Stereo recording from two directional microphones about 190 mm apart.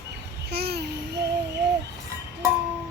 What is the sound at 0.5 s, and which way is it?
Babbling, 60° right (ahead or behind).